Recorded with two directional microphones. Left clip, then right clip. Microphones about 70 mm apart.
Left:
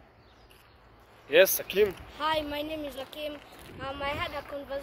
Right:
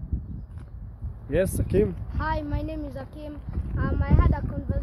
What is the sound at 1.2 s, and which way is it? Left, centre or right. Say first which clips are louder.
Speech: left 4 dB; centre.